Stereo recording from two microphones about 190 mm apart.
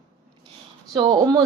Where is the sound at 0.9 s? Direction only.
25° right (ahead or behind).